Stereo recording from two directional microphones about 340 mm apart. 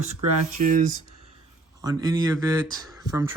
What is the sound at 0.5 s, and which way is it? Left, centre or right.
Speech, right.